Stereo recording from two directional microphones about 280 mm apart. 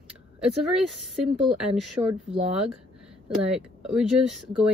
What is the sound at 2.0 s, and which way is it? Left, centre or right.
Speech, centre.